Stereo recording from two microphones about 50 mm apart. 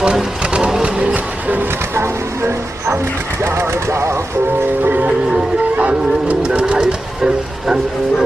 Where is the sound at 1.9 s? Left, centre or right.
Right.